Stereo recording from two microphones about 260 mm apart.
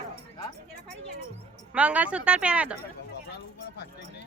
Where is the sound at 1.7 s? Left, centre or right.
Centre.